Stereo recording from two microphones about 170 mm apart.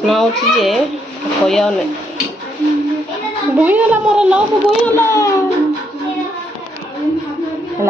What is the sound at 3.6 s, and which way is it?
Speech, 10° right (ahead or behind).